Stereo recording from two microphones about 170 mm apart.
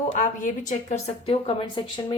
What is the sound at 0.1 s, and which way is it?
Speech, 45° left (ahead or behind).